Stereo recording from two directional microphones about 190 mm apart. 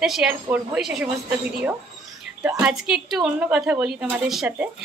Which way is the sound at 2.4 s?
5° right (ahead or behind).